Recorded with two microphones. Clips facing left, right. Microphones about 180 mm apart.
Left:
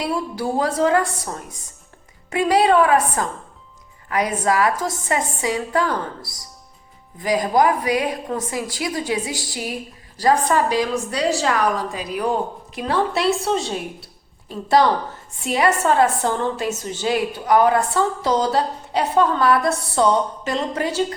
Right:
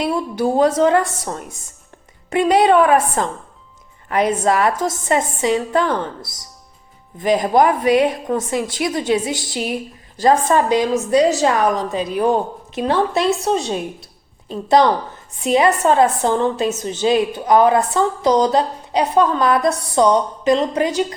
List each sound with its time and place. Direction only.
0.0 s a woman's voice: 25° right (ahead or behind)